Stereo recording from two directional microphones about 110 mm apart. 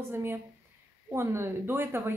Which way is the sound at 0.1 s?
20° right (ahead or behind).